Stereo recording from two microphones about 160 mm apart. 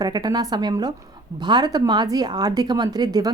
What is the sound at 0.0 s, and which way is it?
Speech, 25° right (ahead or behind).